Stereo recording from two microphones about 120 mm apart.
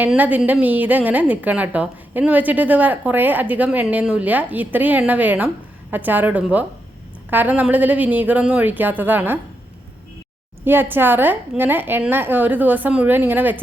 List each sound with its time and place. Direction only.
0.2 s a woman's voice: 15° right (ahead or behind)
10.7 s a woman's voice: 15° right (ahead or behind)